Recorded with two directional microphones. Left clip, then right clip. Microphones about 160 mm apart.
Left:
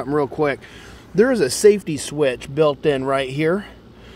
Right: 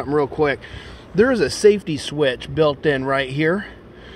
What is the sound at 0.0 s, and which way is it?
Speech, 25° left (ahead or behind).